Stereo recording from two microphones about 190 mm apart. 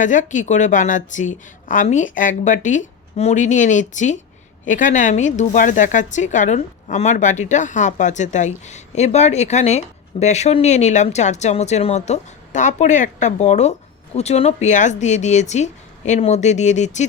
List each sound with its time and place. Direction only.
0.0 s speech: 40° left (ahead or behind)